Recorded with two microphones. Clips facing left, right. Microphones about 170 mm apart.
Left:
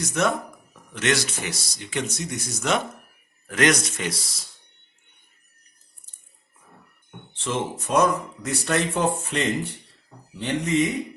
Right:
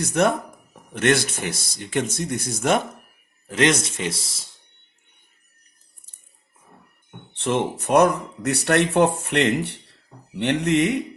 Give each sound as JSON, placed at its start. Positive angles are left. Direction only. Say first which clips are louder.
{"t": 0.0, "sound": "speech", "louder": "right 4 dB", "side_deg": -55}
{"t": 3.4, "sound": "speech", "louder": "right 1 dB", "side_deg": -25}
{"t": 7.3, "sound": "speech", "louder": "right 5 dB", "side_deg": -60}